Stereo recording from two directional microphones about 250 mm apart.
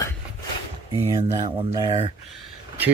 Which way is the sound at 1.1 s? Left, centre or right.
Centre.